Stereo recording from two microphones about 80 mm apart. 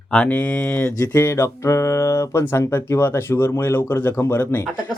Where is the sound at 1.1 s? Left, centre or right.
Left.